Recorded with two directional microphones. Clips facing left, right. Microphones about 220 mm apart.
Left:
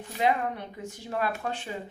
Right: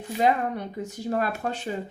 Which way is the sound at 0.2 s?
40° right (ahead or behind).